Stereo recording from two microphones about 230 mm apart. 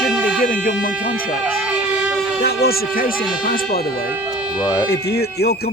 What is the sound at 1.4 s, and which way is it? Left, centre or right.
Siren, centre.